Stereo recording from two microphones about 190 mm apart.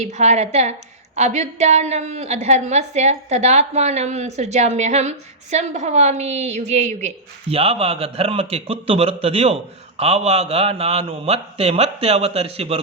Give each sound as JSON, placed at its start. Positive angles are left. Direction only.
{"t": 0.0, "sound": "a woman's voice", "side_deg": -35}